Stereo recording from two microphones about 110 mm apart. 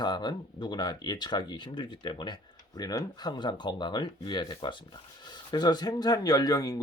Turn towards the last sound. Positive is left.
turn(degrees=30)  # may be behind; listen again after turning